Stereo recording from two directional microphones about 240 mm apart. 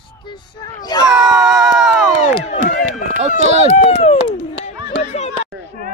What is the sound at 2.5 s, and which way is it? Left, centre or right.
Speech, left.